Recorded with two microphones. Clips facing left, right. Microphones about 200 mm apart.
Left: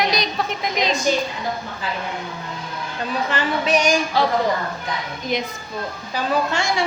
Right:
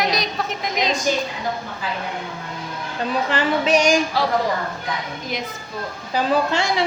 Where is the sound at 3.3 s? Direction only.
35° right (ahead or behind).